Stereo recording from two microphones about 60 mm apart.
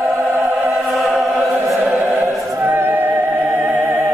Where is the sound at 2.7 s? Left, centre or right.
Right.